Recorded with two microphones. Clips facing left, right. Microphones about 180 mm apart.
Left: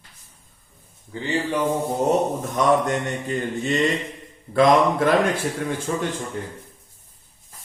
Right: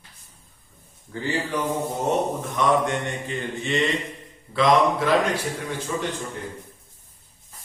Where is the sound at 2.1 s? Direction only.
40° left (ahead or behind).